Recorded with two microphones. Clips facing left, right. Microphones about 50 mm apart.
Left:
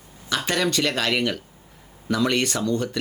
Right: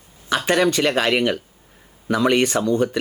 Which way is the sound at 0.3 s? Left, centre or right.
Centre.